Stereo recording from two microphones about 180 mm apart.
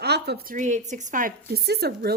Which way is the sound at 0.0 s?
65° right (ahead or behind).